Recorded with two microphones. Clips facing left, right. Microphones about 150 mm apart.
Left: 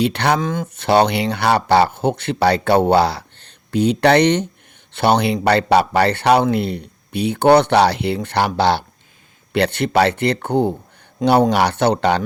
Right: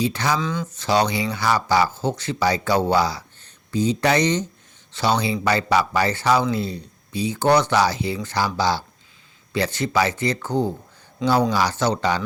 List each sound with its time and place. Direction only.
0.0 s speech: 65° left (ahead or behind)